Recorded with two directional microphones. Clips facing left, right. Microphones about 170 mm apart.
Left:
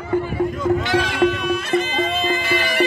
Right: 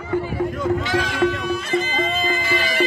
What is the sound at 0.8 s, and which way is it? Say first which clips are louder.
Music: left 2 dB; 65° left (ahead or behind).